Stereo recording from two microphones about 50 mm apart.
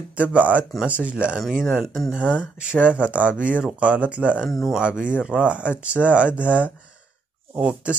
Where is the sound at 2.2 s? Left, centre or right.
Right.